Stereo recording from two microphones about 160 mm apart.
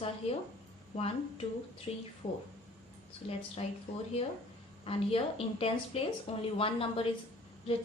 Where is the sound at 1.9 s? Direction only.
40° left (ahead or behind).